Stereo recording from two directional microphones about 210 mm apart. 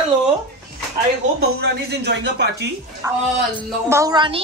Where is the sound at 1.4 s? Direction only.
50° right (ahead or behind).